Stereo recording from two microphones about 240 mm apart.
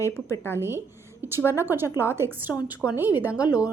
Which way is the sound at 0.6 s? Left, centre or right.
Centre.